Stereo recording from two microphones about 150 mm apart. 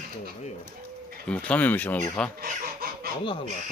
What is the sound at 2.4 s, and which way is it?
Speech, 80° right.